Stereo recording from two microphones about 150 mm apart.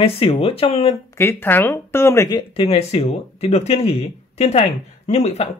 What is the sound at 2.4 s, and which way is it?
Speech, 40° left (ahead or behind).